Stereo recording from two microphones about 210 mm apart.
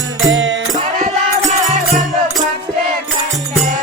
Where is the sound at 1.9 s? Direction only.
Centre (ahead or behind).